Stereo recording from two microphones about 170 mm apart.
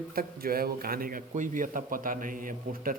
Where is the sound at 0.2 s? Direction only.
60° right (ahead or behind).